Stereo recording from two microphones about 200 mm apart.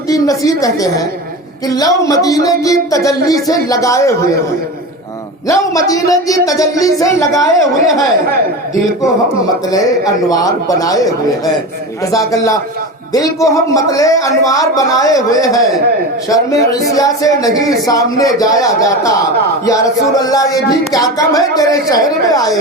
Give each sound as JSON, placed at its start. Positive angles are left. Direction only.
{"t": 0.1, "sound": "a woman's voice", "side_deg": 15}
{"t": 5.5, "sound": "speech", "side_deg": 15}
{"t": 9.6, "sound": "speech", "side_deg": 20}